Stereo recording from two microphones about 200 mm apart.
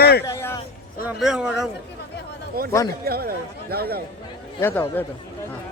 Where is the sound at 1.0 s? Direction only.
5° right (ahead or behind).